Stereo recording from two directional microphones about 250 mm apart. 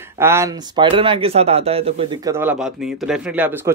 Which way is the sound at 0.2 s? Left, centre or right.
Centre.